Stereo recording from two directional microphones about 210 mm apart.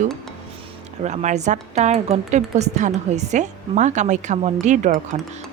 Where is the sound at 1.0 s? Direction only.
35° right (ahead or behind).